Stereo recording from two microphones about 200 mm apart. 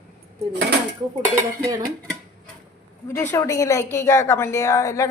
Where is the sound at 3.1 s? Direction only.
10° left (ahead or behind).